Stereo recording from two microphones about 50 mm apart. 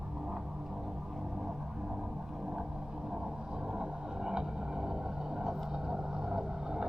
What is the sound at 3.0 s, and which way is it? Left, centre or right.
Vehicle, centre.